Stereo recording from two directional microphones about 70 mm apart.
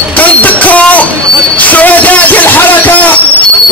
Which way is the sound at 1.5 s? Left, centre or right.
Left.